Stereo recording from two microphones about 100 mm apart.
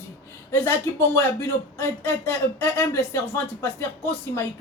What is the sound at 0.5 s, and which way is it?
Speech, 20° left (ahead or behind).